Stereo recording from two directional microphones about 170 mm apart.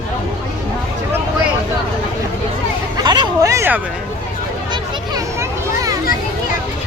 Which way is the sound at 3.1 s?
25° right (ahead or behind).